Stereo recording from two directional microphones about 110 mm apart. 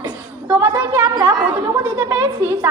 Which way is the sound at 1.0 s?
40° right (ahead or behind).